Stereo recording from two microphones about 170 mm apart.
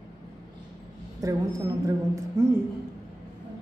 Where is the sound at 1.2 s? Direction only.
20° right (ahead or behind).